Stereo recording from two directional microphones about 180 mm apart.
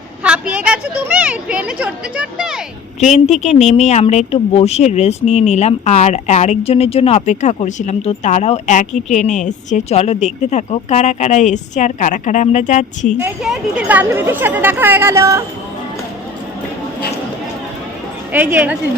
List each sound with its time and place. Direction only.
0.2 s a woman's voice: 5° right (ahead or behind)
3.0 s speech: 40° left (ahead or behind)
13.2 s a woman's voice: 5° right (ahead or behind)
18.3 s a woman's voice: 10° right (ahead or behind)